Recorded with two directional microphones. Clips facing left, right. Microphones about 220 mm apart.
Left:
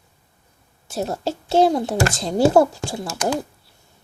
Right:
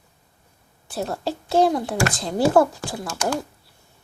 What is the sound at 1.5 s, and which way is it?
A child's voice, 30° left (ahead or behind).